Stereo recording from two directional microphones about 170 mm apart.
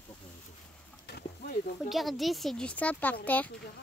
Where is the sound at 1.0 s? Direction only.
65° left (ahead or behind).